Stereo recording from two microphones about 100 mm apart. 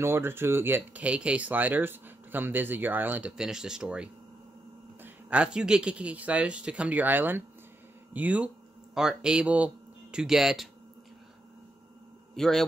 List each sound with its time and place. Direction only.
0.0 s speech: 25° right (ahead or behind); by 10.7 s 5° right (ahead or behind)
12.4 s speech: 5° left (ahead or behind)